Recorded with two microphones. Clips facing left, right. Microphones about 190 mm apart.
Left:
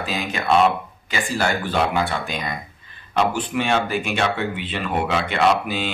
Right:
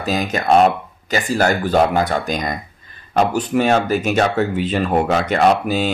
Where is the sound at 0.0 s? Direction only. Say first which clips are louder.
Right 6 dB; 40° right (ahead or behind).